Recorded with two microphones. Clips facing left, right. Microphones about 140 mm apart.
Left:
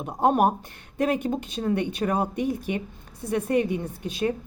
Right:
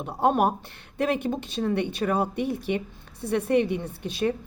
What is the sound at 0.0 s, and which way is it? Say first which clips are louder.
Speech: left 1 dB; 15° left (ahead or behind).